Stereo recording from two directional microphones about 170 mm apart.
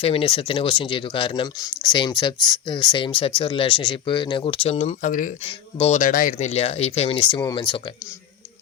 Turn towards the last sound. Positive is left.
turn(degrees=25)  # may be behind; listen again after turning